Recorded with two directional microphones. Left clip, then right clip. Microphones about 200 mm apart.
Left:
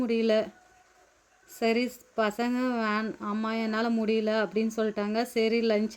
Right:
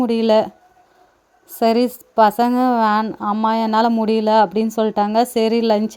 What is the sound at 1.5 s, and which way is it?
Speech, 35° right (ahead or behind).